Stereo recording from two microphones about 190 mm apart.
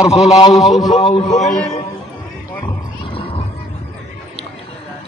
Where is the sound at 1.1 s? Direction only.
35° left (ahead or behind).